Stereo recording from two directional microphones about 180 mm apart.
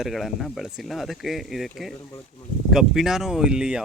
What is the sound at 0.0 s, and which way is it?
Speech, centre (ahead or behind).